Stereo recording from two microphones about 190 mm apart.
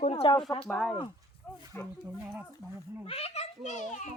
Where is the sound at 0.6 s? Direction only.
5° left (ahead or behind).